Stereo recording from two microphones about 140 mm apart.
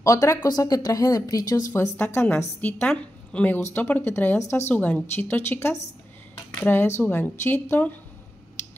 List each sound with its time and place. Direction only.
0.0 s speech: 25° left (ahead or behind)
2.0 s a woman's voice: 15° left (ahead or behind)